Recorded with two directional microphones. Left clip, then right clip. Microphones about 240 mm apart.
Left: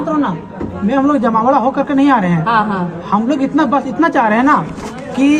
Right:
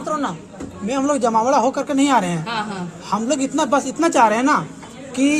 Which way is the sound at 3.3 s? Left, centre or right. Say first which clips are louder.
Left 3 dB; right.